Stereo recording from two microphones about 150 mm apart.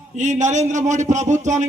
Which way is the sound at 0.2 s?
50° right (ahead or behind).